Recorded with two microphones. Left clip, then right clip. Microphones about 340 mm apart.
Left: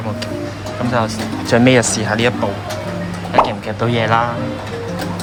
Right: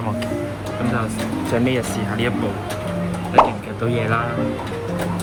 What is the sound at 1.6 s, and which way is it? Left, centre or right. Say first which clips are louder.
Speech: left 9 dB; centre.